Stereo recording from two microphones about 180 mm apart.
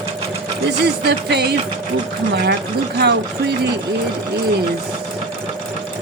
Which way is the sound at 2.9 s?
65° right (ahead or behind).